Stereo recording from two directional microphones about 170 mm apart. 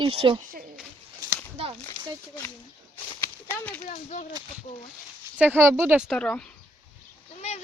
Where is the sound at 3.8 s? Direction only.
45° left (ahead or behind).